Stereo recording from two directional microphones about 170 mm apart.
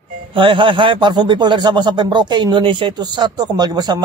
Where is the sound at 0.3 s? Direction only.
30° right (ahead or behind).